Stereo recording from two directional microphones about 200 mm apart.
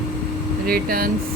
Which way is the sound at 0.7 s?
45° right (ahead or behind).